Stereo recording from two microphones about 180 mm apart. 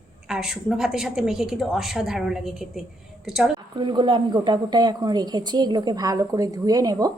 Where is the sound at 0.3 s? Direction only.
Centre (ahead or behind).